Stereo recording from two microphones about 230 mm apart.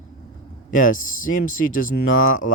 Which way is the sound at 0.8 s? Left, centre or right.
Left.